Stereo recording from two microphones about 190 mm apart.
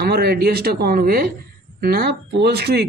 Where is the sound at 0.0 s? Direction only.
55° right (ahead or behind).